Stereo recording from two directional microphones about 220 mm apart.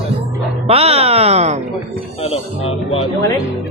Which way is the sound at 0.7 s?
25° right (ahead or behind).